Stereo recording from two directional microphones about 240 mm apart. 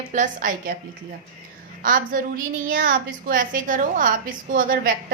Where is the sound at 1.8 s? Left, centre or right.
Right.